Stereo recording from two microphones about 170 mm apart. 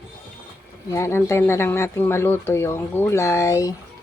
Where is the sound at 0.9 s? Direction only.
15° left (ahead or behind).